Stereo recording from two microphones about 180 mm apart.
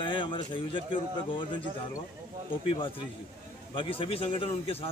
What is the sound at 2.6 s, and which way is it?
A man's voice, 30° left (ahead or behind).